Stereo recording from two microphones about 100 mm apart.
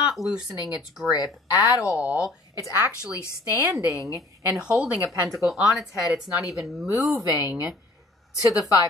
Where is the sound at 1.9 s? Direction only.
10° right (ahead or behind).